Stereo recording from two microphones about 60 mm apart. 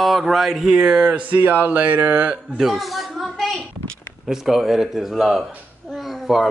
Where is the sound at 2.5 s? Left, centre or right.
Centre.